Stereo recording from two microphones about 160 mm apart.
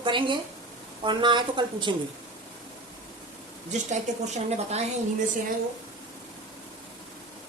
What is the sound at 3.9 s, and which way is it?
Speech, 45° right (ahead or behind).